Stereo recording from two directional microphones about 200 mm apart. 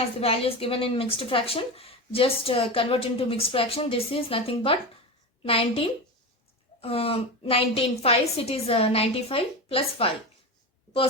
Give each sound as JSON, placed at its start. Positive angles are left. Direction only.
{"t": 0.2, "sound": "a woman's voice", "side_deg": 30}